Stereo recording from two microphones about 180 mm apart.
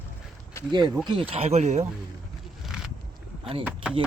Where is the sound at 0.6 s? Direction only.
15° left (ahead or behind).